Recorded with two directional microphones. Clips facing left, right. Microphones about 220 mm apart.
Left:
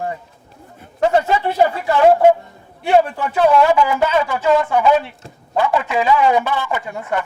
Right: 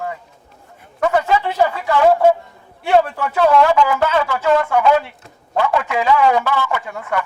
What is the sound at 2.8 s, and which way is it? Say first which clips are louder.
A man's voice: even; 20° left (ahead or behind).